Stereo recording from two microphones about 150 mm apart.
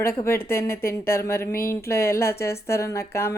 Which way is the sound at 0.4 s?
15° left (ahead or behind).